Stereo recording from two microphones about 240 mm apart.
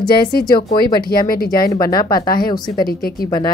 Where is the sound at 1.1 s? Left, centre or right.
Left.